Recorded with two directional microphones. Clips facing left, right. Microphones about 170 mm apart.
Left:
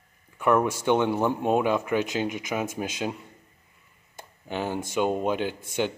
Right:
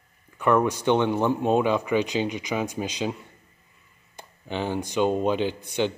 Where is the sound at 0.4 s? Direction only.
5° left (ahead or behind).